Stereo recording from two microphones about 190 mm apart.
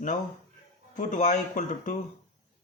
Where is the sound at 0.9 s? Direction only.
40° left (ahead or behind).